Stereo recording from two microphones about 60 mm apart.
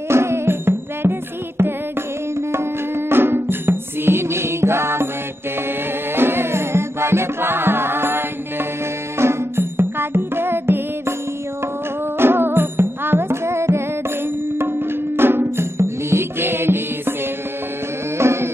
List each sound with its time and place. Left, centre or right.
0.1 s music: right
6.1 s music: right
12.2 s music: right
18.1 s music: right